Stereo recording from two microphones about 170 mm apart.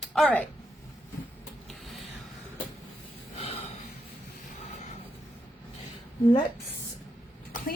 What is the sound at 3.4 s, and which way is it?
Gasp, 35° left (ahead or behind).